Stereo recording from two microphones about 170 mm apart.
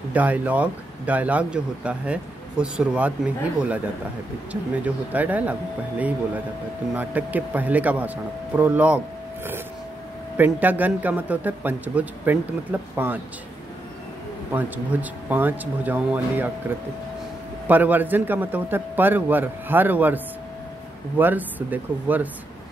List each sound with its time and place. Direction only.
0.1 s speech: 10° right (ahead or behind)
10.3 s speech: 10° right (ahead or behind)
14.5 s speech: 10° right (ahead or behind)
21.2 s speech: 10° right (ahead or behind)